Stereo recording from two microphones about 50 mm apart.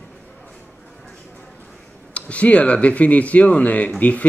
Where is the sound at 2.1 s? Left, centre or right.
Left.